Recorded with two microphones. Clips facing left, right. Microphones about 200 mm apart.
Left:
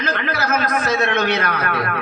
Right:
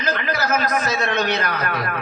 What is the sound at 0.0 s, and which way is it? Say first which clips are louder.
A man's voice: left 1 dB; 55° left (ahead or behind).